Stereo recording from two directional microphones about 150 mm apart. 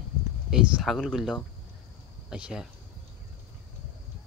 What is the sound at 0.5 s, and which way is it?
Speech, centre (ahead or behind).